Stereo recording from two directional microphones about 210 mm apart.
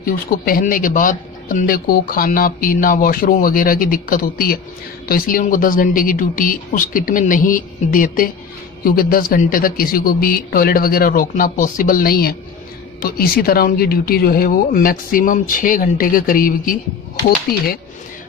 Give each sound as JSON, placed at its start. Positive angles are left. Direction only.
{"t": 0.0, "sound": "a man's voice", "side_deg": 45}